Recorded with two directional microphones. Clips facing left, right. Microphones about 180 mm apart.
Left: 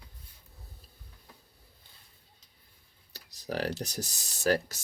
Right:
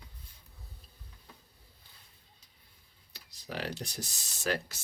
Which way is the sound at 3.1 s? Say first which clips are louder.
Left 6 dB; 40° left (ahead or behind).